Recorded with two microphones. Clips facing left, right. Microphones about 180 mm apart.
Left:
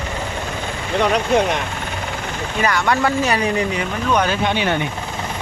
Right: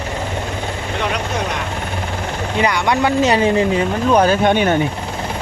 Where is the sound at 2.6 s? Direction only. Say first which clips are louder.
Right 2 dB; 15° right (ahead or behind).